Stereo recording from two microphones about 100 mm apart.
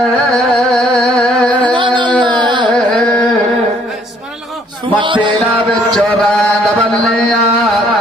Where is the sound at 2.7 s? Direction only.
5° left (ahead or behind).